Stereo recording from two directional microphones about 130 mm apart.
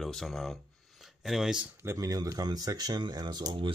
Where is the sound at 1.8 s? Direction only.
20° right (ahead or behind).